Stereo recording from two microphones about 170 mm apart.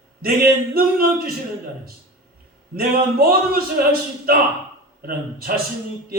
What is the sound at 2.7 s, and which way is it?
A man's voice, 60° right (ahead or behind).